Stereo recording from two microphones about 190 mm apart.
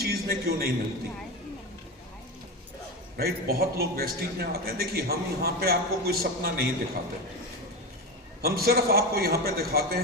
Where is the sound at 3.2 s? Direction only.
55° right (ahead or behind).